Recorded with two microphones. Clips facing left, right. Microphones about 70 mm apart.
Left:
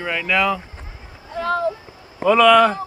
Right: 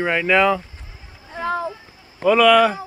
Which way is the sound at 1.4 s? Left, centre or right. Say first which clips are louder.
Left 2 dB; centre.